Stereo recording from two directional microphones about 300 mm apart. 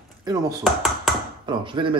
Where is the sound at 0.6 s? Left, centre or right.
Centre.